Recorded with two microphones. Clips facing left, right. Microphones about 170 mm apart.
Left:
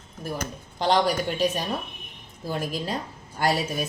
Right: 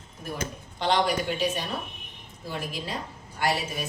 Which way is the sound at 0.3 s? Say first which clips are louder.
Left 1 dB; 40° left (ahead or behind).